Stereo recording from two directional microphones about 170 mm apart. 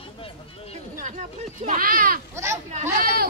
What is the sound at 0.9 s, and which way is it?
Speech, 45° right (ahead or behind).